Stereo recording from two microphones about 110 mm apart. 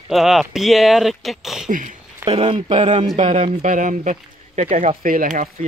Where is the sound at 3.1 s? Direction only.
90° right.